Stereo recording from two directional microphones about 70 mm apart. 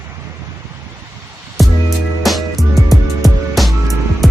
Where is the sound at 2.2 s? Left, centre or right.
Centre.